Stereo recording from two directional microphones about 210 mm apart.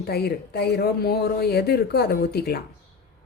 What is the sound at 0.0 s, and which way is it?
A woman's voice, 50° left (ahead or behind).